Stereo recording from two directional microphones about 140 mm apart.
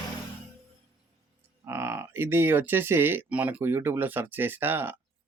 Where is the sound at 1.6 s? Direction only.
15° right (ahead or behind).